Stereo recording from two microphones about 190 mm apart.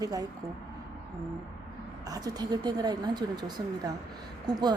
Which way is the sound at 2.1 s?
20° right (ahead or behind).